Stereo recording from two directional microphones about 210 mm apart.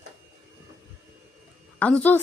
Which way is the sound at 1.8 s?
5° left (ahead or behind).